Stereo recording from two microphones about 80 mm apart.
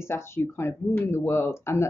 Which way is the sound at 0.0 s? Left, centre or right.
Left.